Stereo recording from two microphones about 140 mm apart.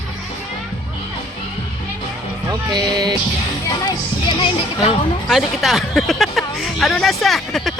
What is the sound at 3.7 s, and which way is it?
Music, 30° left (ahead or behind).